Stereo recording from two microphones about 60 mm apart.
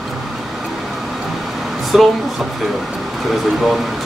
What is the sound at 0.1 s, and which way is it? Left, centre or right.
Vehicle, centre.